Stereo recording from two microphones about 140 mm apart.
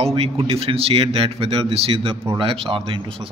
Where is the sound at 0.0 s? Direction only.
45° right (ahead or behind).